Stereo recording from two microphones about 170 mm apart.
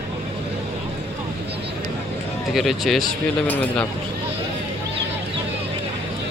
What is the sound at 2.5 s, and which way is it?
Speech, centre (ahead or behind).